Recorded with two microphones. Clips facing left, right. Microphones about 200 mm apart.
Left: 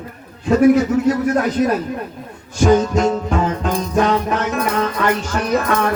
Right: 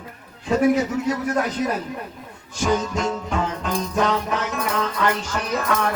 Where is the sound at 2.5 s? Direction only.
50° left (ahead or behind).